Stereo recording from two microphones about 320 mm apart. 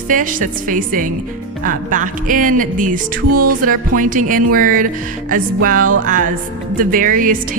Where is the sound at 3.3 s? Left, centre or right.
Right.